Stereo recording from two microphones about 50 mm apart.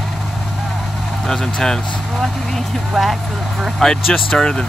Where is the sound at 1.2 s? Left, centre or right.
Centre.